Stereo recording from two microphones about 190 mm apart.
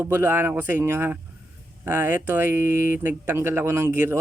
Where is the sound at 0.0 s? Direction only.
10° right (ahead or behind).